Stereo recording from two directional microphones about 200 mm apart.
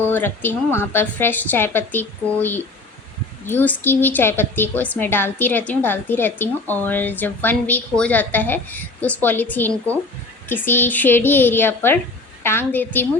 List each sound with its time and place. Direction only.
0.1 s a woman's voice: 10° left (ahead or behind)